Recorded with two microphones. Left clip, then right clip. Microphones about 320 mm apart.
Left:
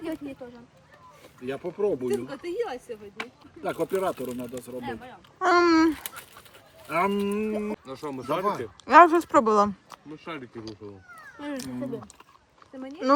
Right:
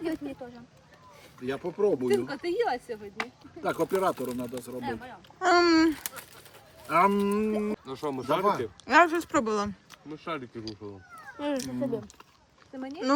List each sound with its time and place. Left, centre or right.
0.0 s a sound: centre
1.4 s speech: centre
2.5 s a woman's voice: right
3.2 s speech: centre